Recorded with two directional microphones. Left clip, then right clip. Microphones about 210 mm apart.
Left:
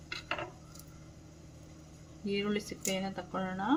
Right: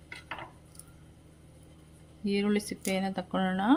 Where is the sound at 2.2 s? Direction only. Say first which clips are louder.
Right 4 dB; 45° right (ahead or behind).